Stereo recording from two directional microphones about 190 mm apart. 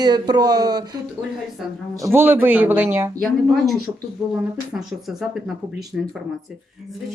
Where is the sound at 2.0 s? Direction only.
10° right (ahead or behind).